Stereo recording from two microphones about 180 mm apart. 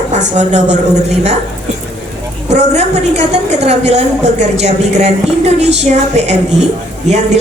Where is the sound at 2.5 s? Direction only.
40° right (ahead or behind).